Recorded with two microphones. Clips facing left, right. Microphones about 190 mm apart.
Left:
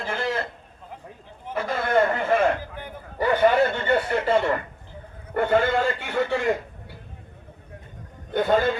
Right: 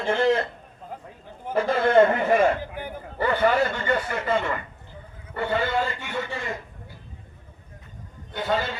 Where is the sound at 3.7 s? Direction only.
30° left (ahead or behind).